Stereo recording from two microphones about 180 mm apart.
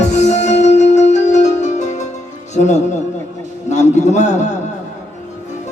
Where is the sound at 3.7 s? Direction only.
40° left (ahead or behind).